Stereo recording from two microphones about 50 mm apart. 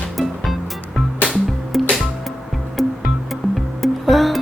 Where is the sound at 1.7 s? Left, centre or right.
Centre.